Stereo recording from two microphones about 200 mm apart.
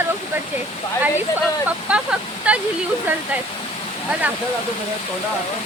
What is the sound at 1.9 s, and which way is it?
Speech, 5° right (ahead or behind).